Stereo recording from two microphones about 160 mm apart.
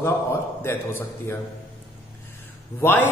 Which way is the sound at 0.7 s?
15° left (ahead or behind).